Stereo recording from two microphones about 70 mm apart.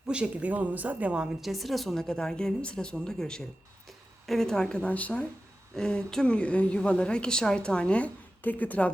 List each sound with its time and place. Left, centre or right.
0.1 s a woman's voice: centre
1.4 s a woman's voice: centre; by 8.9 s left